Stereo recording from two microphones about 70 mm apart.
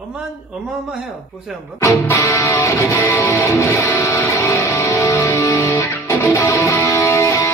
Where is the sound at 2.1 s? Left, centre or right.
Left.